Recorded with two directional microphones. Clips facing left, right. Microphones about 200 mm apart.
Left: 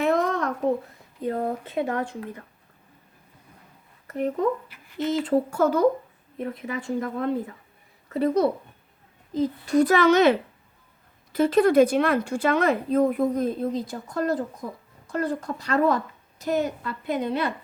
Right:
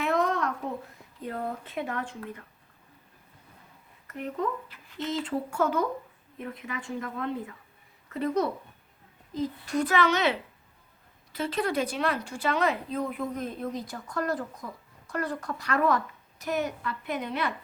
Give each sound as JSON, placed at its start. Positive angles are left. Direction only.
{"t": 0.0, "sound": "a sound", "side_deg": 40}
{"t": 1.2, "sound": "speech", "side_deg": 35}
{"t": 4.7, "sound": "speech", "side_deg": 10}
{"t": 5.2, "sound": "speech", "side_deg": 40}